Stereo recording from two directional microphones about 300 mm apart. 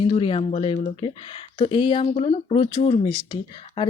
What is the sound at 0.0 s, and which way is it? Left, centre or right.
Speech, centre.